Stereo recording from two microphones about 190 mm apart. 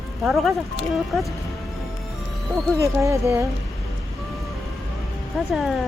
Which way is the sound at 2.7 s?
15° right (ahead or behind).